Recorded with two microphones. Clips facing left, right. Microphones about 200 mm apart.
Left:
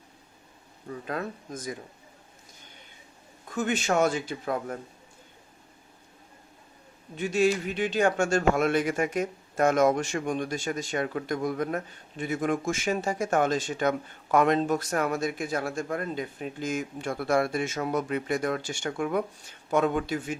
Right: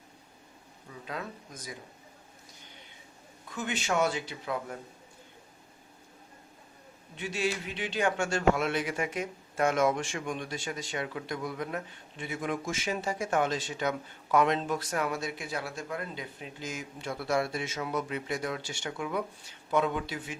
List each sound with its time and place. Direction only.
0.9 s speech: 50° left (ahead or behind)
3.5 s speech: 45° left (ahead or behind)
7.2 s speech: 45° left (ahead or behind)